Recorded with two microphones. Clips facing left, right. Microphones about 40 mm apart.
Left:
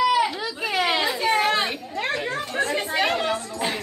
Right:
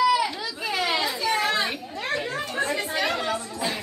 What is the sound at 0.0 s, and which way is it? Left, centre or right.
Baby cry, left.